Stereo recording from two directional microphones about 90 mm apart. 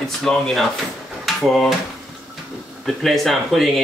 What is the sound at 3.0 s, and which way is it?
Speech, centre (ahead or behind).